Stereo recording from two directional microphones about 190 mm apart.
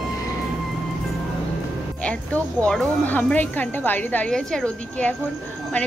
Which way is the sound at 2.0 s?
5° left (ahead or behind).